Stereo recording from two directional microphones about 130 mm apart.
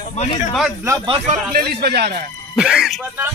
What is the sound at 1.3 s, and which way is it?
Speech, 70° right (ahead or behind).